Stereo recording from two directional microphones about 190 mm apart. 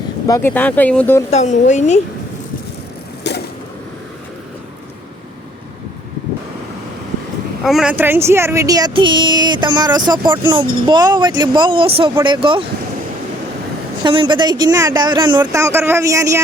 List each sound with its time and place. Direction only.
0.3 s speech: 15° left (ahead or behind)
1.3 s speech: 40° left (ahead or behind)
3.3 s a sound: 60° left (ahead or behind)
7.6 s speech: centre (ahead or behind); by 12.6 s 30° right (ahead or behind)
14.0 s speech: 25° right (ahead or behind)